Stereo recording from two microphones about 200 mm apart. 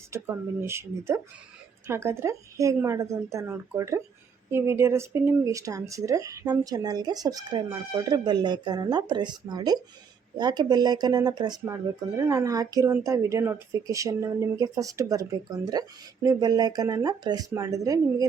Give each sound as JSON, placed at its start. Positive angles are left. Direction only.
{"t": 0.1, "sound": "speech", "side_deg": -10}